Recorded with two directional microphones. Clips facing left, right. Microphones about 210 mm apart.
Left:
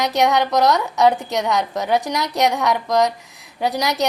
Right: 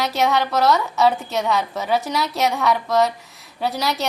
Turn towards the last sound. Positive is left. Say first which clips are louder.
# left 2 dB
turn(degrees=15)  # may be behind; listen again after turning